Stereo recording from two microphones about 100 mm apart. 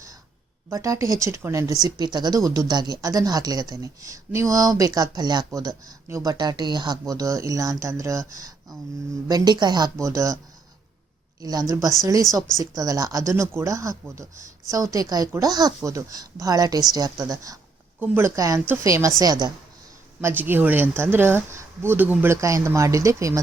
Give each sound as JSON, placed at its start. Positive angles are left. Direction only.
{"t": 0.7, "sound": "speech", "side_deg": -30}
{"t": 1.8, "sound": "speech", "side_deg": -45}
{"t": 5.5, "sound": "speech", "side_deg": -35}
{"t": 6.4, "sound": "speech", "side_deg": -45}
{"t": 11.3, "sound": "a woman's voice", "side_deg": -40}
{"t": 18.0, "sound": "speech", "side_deg": -20}
{"t": 18.3, "sound": "speech", "side_deg": -35}
{"t": 20.2, "sound": "speech", "side_deg": -20}